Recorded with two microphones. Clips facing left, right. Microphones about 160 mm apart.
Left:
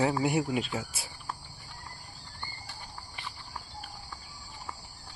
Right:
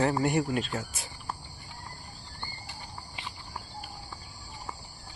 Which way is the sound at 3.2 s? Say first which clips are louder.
Right 1 dB; 20° right (ahead or behind).